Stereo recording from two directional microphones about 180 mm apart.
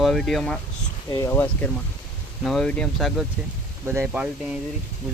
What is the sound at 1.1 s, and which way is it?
Speech, 15° left (ahead or behind).